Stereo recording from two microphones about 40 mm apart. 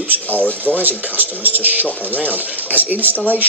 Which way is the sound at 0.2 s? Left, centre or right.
Left.